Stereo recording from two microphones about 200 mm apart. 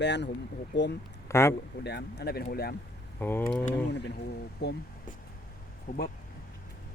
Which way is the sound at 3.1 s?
10° left (ahead or behind).